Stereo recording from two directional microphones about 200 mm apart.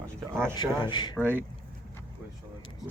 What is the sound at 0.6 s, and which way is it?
Speech, 20° left (ahead or behind).